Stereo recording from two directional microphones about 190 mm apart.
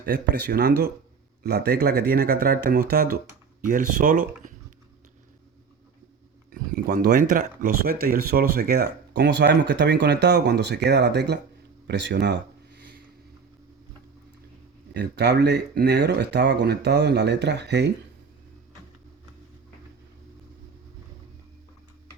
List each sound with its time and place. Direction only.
0.0 s speech: 60° right (ahead or behind); by 4.5 s 45° right (ahead or behind)
6.5 s a sound: 50° right (ahead or behind)
7.3 s speech: 45° right (ahead or behind); by 12.8 s 65° right (ahead or behind)
14.9 s speech: 60° right (ahead or behind)